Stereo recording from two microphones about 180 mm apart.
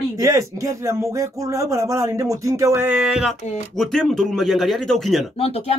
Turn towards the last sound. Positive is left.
turn(degrees=35)  # may be behind; listen again after turning